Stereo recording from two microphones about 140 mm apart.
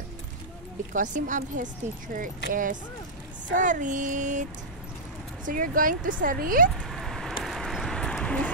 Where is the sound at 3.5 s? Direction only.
65° right (ahead or behind).